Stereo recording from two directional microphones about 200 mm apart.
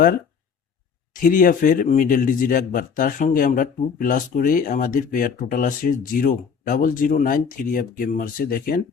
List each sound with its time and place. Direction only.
1.1 s a man's voice: 45° left (ahead or behind)